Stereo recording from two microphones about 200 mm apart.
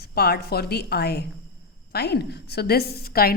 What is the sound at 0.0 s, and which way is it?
A woman's voice, 50° left (ahead or behind).